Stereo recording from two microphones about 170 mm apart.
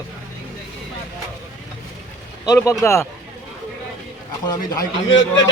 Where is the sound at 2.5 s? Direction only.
20° left (ahead or behind).